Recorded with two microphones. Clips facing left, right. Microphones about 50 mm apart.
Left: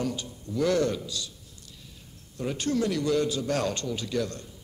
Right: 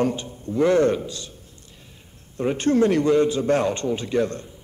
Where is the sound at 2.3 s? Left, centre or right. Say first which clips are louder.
Right 8 dB; right.